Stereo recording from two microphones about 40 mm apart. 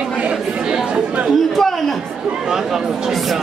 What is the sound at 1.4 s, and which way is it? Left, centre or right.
Chatter, centre.